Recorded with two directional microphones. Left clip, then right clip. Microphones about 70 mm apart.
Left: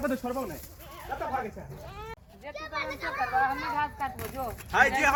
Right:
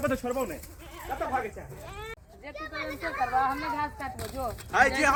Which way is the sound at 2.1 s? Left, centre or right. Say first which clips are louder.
Even; centre.